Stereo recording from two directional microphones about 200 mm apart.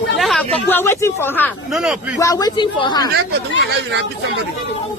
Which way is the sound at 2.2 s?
15° left (ahead or behind).